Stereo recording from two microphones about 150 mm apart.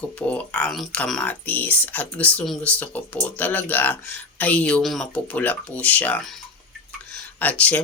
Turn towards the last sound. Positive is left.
turn(degrees=10)  # may be behind; listen again after turning